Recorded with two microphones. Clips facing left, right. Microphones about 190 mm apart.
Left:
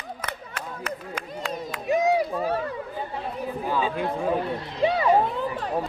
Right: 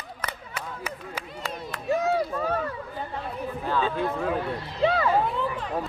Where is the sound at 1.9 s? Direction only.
15° left (ahead or behind).